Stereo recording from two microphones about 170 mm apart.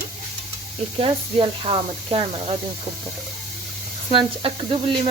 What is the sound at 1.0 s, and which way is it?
Speech, 30° right (ahead or behind).